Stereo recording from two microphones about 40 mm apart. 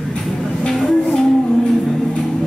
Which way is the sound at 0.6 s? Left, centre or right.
Centre.